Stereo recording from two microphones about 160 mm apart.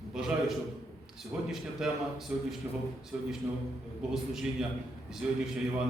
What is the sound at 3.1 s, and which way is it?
Speech, 5° right (ahead or behind).